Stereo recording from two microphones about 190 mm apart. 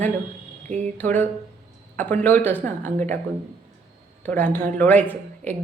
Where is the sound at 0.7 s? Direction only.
35° right (ahead or behind).